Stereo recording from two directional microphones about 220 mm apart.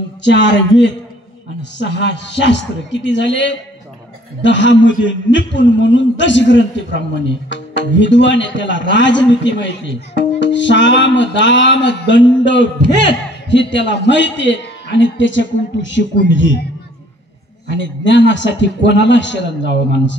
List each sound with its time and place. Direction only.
0.2 s a man's voice: 55° left (ahead or behind)
17.6 s a man's voice: 55° left (ahead or behind)